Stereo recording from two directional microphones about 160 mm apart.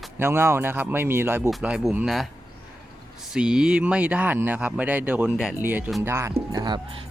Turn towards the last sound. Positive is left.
turn(degrees=-25)  # may be behind; listen again after turning